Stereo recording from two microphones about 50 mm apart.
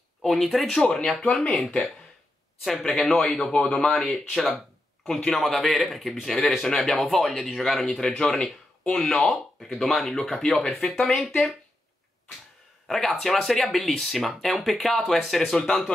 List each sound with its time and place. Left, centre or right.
0.2 s a man's voice: centre
1.3 s speech: left
2.8 s a man's voice: centre
12.8 s speech: centre